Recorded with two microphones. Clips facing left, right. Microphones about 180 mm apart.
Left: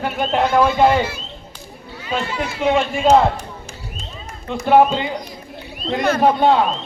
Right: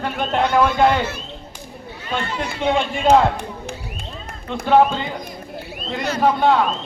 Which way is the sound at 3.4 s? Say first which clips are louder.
Right 4 dB; 60° right (ahead or behind).